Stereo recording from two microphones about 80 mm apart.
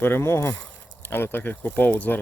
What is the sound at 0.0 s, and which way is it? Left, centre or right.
Speech, left.